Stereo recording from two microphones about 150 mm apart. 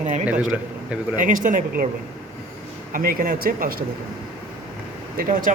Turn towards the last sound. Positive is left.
turn(degrees=-65)  # may be behind; listen again after turning